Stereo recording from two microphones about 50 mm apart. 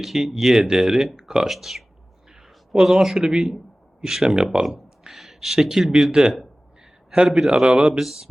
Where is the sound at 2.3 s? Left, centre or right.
Centre.